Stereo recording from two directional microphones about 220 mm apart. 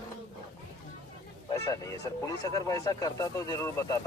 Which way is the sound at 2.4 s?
15° left (ahead or behind).